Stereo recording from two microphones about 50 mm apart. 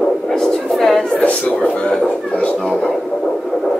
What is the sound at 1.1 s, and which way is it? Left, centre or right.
Speech, left.